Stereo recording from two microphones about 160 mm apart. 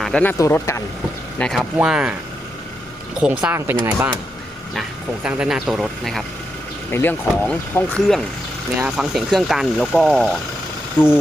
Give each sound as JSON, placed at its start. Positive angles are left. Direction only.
{"t": 0.0, "sound": "speech", "side_deg": 5}
{"t": 0.3, "sound": "speech", "side_deg": 20}
{"t": 1.4, "sound": "speech", "side_deg": 0}
{"t": 3.2, "sound": "speech", "side_deg": -5}
{"t": 6.9, "sound": "speech", "side_deg": 10}
{"t": 8.8, "sound": "speech", "side_deg": 0}
{"t": 11.0, "sound": "speech", "side_deg": 15}